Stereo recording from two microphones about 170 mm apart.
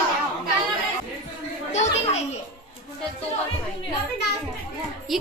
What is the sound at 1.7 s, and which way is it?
Children playing, 40° left (ahead or behind).